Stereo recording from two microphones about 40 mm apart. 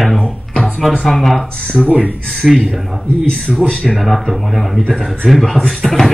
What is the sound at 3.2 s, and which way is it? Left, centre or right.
Speech, left.